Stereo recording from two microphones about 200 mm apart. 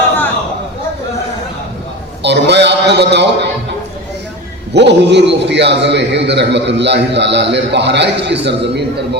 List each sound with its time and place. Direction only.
2.2 s music: 60° right (ahead or behind)
4.7 s a man's voice: 60° right (ahead or behind)